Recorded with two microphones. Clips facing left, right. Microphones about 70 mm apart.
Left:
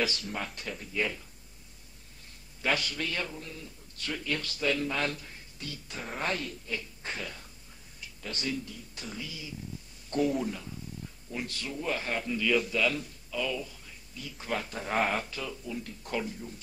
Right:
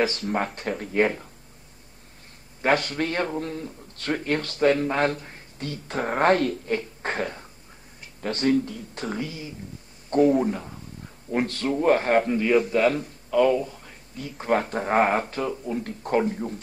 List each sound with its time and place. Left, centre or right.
0.0 s a man's voice: right
2.6 s a man's voice: right
11.3 s a man's voice: right